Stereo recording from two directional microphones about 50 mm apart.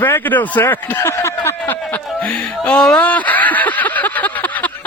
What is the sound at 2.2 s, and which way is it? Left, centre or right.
Music, centre.